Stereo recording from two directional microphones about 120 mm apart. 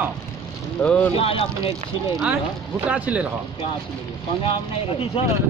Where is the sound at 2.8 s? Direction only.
10° right (ahead or behind).